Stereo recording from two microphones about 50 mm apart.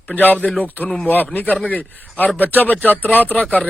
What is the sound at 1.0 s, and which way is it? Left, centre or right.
A man's voice, left.